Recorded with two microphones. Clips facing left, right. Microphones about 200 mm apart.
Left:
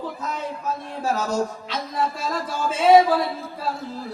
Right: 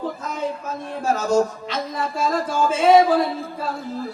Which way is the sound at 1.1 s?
45° right (ahead or behind).